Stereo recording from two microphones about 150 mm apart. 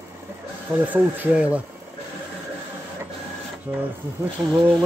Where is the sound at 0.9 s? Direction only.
10° right (ahead or behind).